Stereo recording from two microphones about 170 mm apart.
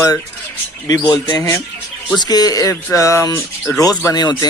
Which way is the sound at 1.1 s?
20° left (ahead or behind).